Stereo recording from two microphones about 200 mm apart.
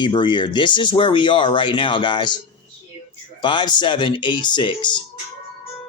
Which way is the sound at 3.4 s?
25° left (ahead or behind).